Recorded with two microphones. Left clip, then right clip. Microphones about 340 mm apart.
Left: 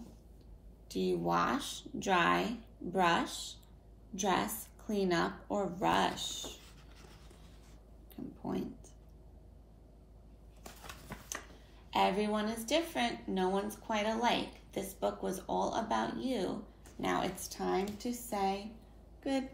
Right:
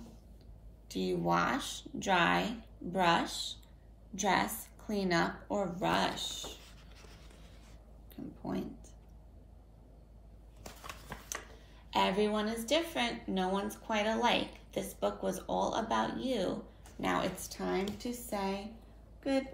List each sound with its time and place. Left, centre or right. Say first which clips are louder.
0.8 s speech: even; centre
1.6 s speech: right 1 dB; left
2.0 s speech: right 1 dB; centre
3.3 s speech: right 4 dB; centre
4.2 s a woman's voice: right 2 dB; centre
8.5 s speech: even; centre
10.9 s a sound: right 2 dB; centre
11.9 s speech: right 1 dB; centre